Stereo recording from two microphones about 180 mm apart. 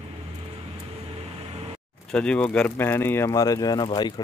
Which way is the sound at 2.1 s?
5° left (ahead or behind).